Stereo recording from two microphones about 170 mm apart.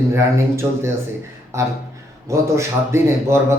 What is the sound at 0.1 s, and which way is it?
Speech, 15° right (ahead or behind).